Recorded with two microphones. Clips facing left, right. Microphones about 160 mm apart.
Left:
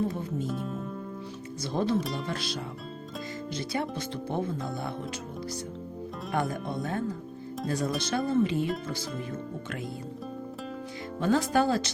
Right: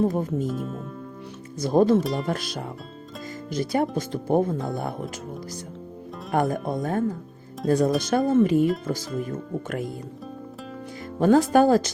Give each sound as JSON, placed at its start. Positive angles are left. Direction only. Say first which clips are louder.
{"t": 0.0, "sound": "speech", "louder": "right 7 dB", "side_deg": -45}
{"t": 0.4, "sound": "speech", "louder": "right 4 dB", "side_deg": 0}
{"t": 1.6, "sound": "speech", "louder": "right 9 dB", "side_deg": -45}
{"t": 6.3, "sound": "speech", "louder": "right 7 dB", "side_deg": -45}
{"t": 11.2, "sound": "speech", "louder": "right 8 dB", "side_deg": -50}